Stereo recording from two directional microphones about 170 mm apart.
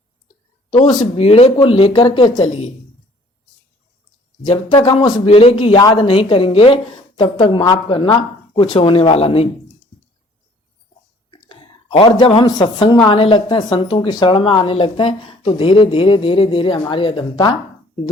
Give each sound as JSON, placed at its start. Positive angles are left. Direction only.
{"t": 1.1, "sound": "speech", "side_deg": 35}
{"t": 4.4, "sound": "speech", "side_deg": 30}
{"t": 11.3, "sound": "a woman's voice", "side_deg": 30}